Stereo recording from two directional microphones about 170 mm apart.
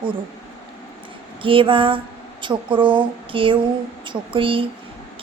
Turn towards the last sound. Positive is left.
turn(degrees=-30)  # may be behind; listen again after turning